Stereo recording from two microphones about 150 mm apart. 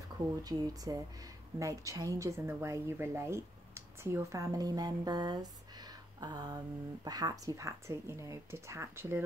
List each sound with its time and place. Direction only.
0.4 s a woman's voice: 25° right (ahead or behind)